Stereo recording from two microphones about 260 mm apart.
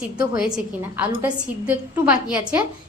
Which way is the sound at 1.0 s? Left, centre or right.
Centre.